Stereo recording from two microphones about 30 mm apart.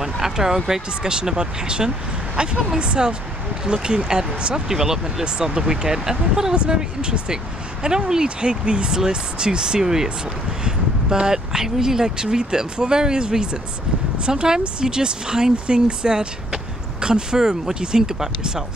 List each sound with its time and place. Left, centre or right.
0.0 s speech: centre
1.0 s speech: right
4.6 s speech: centre
6.5 s speech: right
15.5 s speech: right